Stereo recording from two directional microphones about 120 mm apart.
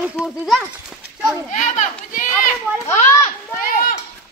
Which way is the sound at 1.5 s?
85° left.